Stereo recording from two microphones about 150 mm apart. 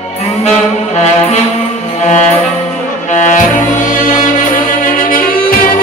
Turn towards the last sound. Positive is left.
turn(degrees=70)  # may be behind; listen again after turning